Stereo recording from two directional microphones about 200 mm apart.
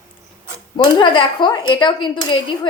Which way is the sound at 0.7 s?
25° left (ahead or behind).